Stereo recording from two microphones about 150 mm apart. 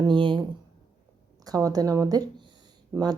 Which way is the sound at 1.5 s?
25° right (ahead or behind).